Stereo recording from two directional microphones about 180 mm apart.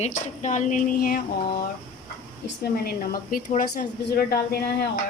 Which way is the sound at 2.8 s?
55° left (ahead or behind).